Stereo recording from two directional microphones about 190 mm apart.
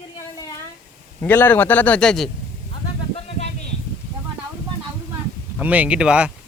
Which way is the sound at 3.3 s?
35° left (ahead or behind).